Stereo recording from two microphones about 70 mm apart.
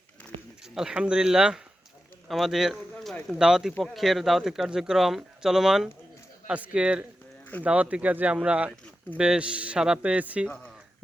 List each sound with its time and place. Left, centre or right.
0.7 s speech: centre